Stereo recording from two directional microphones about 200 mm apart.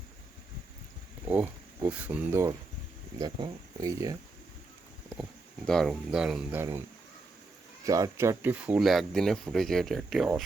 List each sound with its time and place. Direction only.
1.3 s speech: 10° right (ahead or behind)
5.6 s speech: centre (ahead or behind)
7.9 s speech: 15° right (ahead or behind); by 10.4 s centre (ahead or behind)